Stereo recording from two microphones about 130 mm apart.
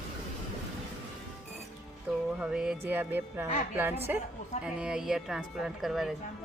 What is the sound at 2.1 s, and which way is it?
Music, 5° right (ahead or behind).